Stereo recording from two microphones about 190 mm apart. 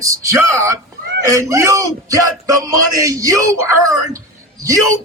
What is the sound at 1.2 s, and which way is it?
Speech, 15° right (ahead or behind).